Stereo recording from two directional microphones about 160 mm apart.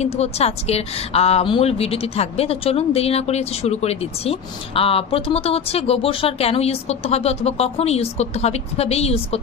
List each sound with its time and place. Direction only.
0.0 s a woman's voice: 40° left (ahead or behind)